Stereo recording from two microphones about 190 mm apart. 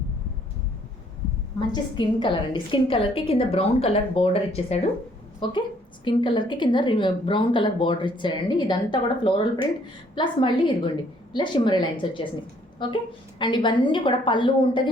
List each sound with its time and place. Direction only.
1.5 s a woman's voice: 25° left (ahead or behind)